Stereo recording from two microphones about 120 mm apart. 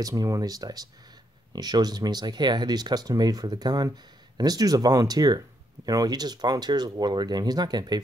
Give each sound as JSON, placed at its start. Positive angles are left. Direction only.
{"t": 0.0, "sound": "speech", "side_deg": -30}